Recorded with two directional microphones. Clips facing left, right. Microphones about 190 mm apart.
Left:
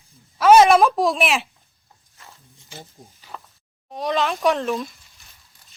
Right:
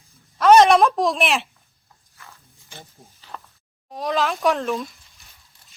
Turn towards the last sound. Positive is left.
turn(degrees=0)  # may be behind; listen again after turning